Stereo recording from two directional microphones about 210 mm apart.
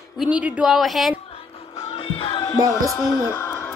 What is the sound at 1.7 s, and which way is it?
Music, 30° left (ahead or behind).